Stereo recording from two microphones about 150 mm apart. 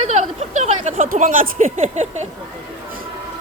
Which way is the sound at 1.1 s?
60° right (ahead or behind).